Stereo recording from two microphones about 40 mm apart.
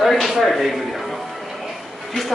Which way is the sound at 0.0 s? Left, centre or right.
Centre.